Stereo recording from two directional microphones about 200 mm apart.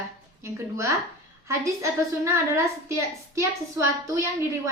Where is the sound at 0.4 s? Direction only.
15° right (ahead or behind).